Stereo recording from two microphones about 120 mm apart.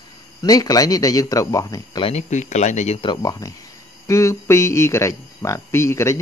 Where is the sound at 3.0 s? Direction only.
40° left (ahead or behind).